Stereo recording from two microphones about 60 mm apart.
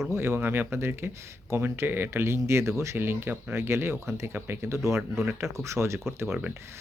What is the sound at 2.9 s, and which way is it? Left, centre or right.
Speech, right.